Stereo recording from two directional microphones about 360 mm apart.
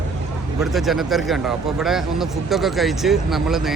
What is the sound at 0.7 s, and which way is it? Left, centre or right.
Speech, centre.